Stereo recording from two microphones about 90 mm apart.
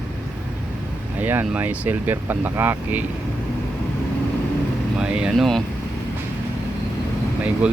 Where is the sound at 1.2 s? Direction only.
20° right (ahead or behind).